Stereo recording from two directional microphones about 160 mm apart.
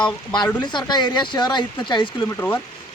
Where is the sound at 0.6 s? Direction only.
30° left (ahead or behind).